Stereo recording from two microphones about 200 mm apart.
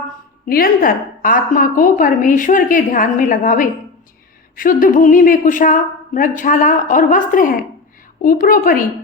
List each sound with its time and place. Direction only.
0.4 s a woman's voice: 45° left (ahead or behind)